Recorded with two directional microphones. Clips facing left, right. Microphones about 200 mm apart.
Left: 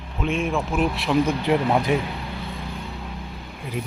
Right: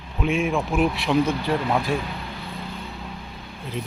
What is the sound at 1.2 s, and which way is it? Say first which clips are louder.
Speech: left 3 dB; 15° left (ahead or behind).